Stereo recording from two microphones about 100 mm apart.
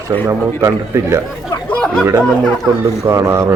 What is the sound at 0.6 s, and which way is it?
Speech, 25° right (ahead or behind).